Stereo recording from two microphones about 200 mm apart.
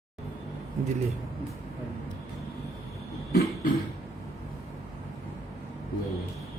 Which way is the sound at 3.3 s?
50° left (ahead or behind).